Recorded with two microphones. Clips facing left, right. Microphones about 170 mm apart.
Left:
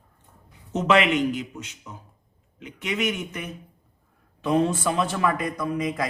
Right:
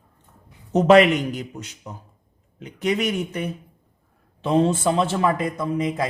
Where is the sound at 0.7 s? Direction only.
40° right (ahead or behind).